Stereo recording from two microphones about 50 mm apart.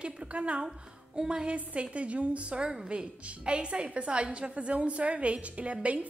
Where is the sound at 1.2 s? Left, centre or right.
Centre.